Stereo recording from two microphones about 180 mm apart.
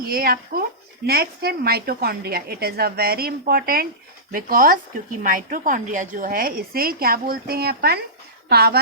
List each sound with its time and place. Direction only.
0.0 s a woman's voice: 55° right (ahead or behind)